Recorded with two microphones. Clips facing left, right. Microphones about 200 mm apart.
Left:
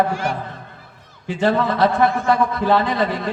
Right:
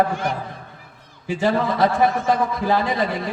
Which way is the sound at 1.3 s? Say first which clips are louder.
Left 2 dB; 60° left (ahead or behind).